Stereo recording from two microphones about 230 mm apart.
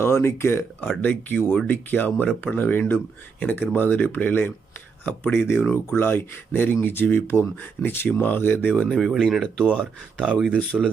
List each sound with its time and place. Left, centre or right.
0.0 s speech: centre